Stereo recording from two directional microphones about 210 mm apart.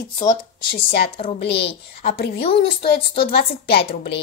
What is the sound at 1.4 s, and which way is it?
Speech, 55° left (ahead or behind).